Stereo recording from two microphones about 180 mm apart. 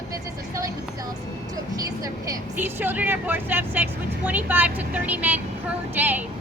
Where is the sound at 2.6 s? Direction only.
10° right (ahead or behind).